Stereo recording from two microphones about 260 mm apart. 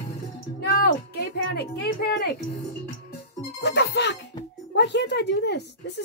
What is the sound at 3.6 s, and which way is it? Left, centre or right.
Speech, left.